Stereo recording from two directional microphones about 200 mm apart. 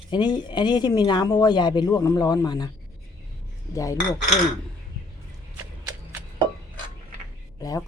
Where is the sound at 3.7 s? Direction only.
15° left (ahead or behind).